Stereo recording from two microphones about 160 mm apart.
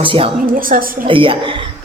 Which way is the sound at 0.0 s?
35° right (ahead or behind).